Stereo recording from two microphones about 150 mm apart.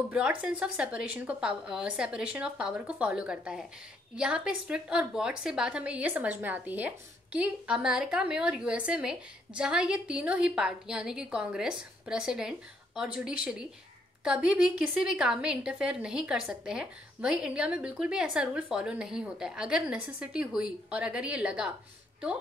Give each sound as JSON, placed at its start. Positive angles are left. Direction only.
{"t": 0.1, "sound": "a woman's voice", "side_deg": -5}